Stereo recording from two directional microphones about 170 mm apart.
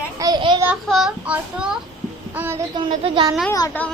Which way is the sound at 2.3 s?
10° right (ahead or behind).